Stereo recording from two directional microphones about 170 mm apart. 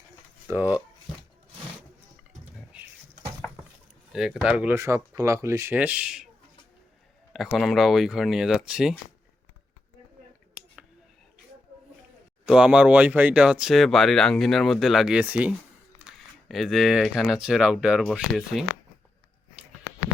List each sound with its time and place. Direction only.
0.4 s speech: 10° right (ahead or behind)
4.1 s speech: 5° right (ahead or behind)
7.3 s speech: centre (ahead or behind)
12.5 s speech: 5° right (ahead or behind)